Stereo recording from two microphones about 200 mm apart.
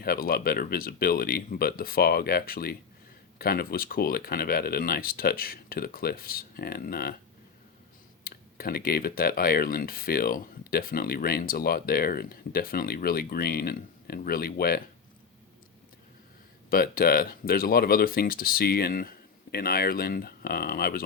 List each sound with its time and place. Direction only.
0.0 s speech: 50° left (ahead or behind)
8.2 s speech: 50° left (ahead or behind)
16.6 s speech: 45° left (ahead or behind)